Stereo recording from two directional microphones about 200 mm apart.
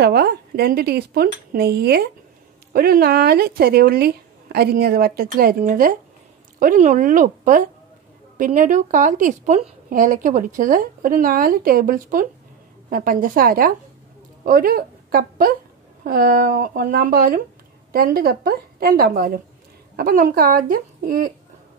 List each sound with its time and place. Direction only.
0.0 s a woman's voice: 50° right (ahead or behind)